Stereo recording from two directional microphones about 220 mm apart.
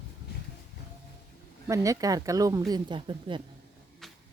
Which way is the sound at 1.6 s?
15° right (ahead or behind).